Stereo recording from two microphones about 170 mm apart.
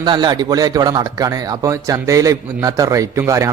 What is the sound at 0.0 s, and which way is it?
Speech, 25° right (ahead or behind).